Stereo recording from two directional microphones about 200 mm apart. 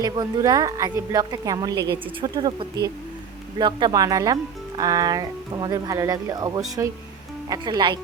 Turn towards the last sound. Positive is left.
turn(degrees=-20)  # may be behind; listen again after turning